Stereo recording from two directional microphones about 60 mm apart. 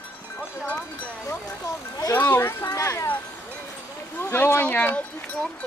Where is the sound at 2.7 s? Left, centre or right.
Left.